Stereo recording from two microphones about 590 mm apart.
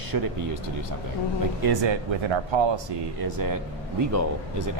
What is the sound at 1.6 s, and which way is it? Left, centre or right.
Speech, right.